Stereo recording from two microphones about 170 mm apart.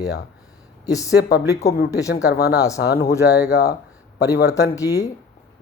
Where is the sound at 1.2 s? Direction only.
75° left (ahead or behind).